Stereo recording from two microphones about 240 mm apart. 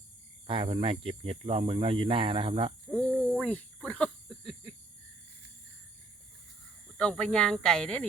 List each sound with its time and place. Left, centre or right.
0.4 s speech: right
2.9 s a sound: centre
6.9 s speech: centre